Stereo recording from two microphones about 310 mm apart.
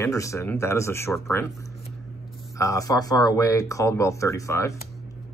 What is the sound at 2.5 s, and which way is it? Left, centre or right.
Speech, centre.